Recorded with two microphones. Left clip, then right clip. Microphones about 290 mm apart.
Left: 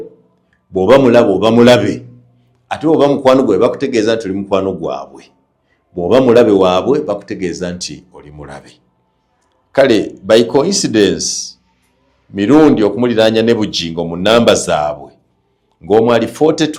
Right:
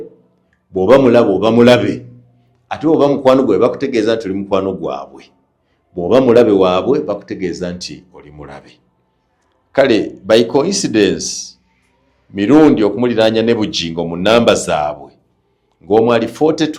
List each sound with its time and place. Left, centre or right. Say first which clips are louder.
0.7 s a man's voice: left 1 dB; left